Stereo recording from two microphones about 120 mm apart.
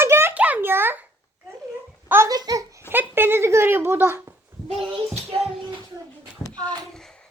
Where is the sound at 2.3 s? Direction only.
30° right (ahead or behind).